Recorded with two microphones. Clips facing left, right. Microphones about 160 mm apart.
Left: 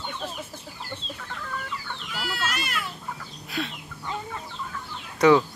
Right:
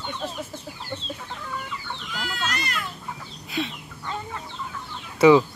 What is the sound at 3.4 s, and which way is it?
Chicken, centre (ahead or behind).